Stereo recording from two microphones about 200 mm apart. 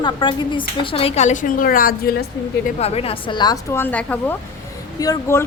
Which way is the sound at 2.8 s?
30° left (ahead or behind).